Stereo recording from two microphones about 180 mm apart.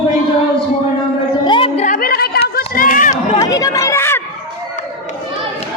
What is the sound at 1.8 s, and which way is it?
Chatter, 50° left (ahead or behind).